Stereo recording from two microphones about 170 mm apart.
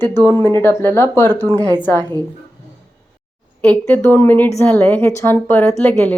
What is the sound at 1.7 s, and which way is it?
Speech, 10° left (ahead or behind).